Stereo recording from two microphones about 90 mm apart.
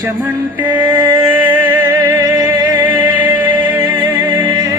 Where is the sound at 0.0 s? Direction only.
20° right (ahead or behind).